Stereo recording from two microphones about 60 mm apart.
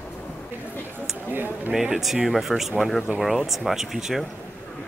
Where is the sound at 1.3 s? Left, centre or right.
Right.